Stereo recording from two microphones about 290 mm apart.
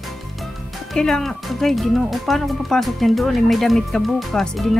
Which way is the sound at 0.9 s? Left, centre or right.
Centre.